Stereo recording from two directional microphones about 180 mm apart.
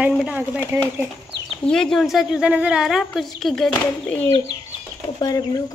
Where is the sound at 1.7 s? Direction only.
5° left (ahead or behind).